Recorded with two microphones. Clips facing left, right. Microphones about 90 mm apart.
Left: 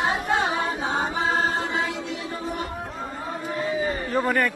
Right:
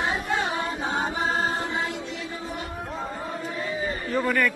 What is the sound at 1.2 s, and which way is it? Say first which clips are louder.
Chant: left 2 dB; 90° left.